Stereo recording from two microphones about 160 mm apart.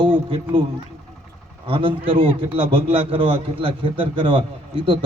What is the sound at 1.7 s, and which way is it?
Speech, 35° right (ahead or behind).